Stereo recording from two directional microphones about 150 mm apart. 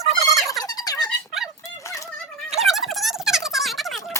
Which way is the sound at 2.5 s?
Centre (ahead or behind).